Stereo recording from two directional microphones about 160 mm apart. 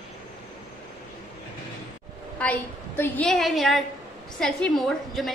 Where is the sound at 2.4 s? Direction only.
10° left (ahead or behind).